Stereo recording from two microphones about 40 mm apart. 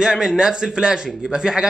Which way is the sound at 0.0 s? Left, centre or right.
Centre.